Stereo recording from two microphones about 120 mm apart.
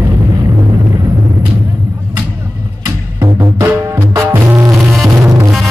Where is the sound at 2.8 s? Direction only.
20° right (ahead or behind).